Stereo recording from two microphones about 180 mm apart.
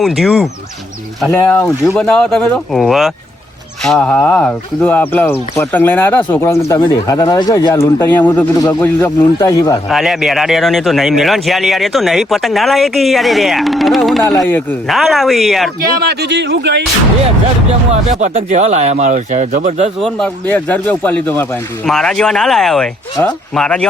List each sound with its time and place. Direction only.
0.0 s a man's voice: centre (ahead or behind)
1.4 s a man's voice: 15° left (ahead or behind)
9.9 s a man's voice: centre (ahead or behind)
14.3 s speech: 10° left (ahead or behind)
14.8 s a man's voice: centre (ahead or behind)
16.0 s speech: 65° right (ahead or behind)
17.9 s speech: 45° right (ahead or behind)
20.0 s a man's voice: 5° left (ahead or behind)